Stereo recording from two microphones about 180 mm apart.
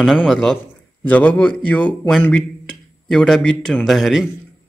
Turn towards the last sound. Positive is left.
turn(degrees=0)  # may be behind; listen again after turning